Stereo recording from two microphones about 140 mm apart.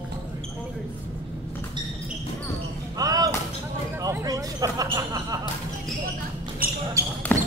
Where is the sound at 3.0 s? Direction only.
25° right (ahead or behind).